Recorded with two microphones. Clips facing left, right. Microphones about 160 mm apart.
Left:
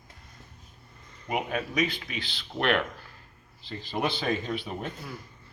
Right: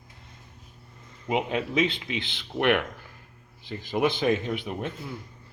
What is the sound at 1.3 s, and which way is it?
A man's voice, 20° right (ahead or behind).